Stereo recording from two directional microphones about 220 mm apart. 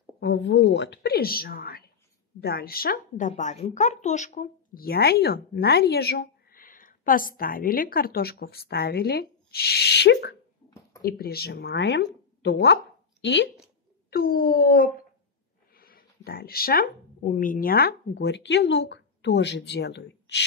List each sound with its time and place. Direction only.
0.2 s a woman's voice: 55° left (ahead or behind)
14.1 s speech: 40° left (ahead or behind)
15.7 s a sound: 40° left (ahead or behind)
16.3 s a woman's voice: 45° left (ahead or behind)